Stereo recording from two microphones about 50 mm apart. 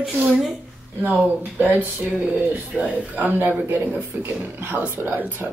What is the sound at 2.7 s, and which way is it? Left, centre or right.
Speech, right.